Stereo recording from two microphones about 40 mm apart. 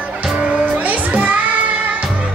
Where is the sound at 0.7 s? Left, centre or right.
Right.